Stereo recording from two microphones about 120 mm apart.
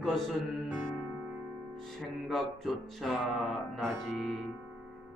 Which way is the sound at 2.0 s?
Centre (ahead or behind).